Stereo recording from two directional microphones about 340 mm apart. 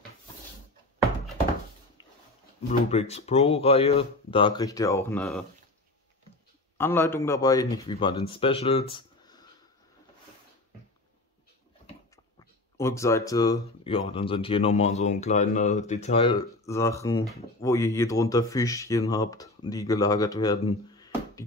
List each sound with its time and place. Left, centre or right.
2.9 s speech: centre
6.8 s speech: centre
8.9 s a sound: centre
12.7 s speech: centre